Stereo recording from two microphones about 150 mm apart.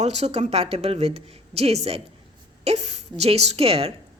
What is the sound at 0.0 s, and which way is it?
A woman's voice, 45° right (ahead or behind).